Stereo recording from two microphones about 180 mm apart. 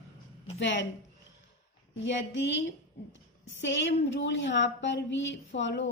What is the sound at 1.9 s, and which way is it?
Speech, 85° left.